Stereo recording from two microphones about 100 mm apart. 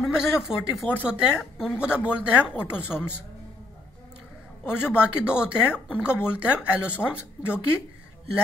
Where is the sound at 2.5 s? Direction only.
10° right (ahead or behind).